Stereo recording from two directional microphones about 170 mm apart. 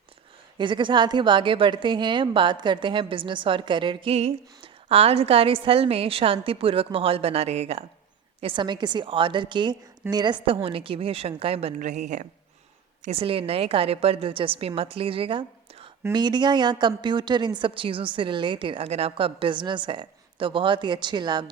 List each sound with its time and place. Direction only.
0.6 s a woman's voice: 30° right (ahead or behind)